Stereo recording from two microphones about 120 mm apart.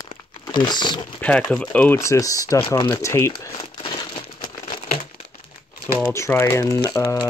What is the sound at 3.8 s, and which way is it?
Crumpling, 40° left (ahead or behind).